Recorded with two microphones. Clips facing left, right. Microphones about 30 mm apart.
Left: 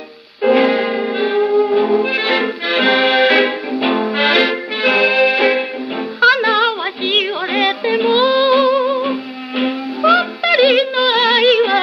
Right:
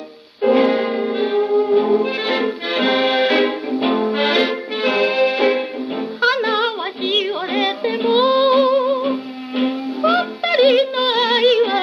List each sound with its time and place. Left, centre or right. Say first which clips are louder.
0.5 s music: left 2 dB; left
1.5 s music: even; centre; by 11.8 s left